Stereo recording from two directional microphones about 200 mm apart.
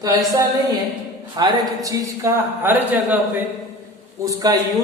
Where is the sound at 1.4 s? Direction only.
20° right (ahead or behind).